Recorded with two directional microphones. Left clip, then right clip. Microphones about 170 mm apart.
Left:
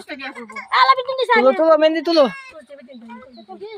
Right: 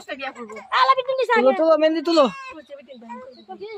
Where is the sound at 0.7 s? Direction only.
30° left (ahead or behind).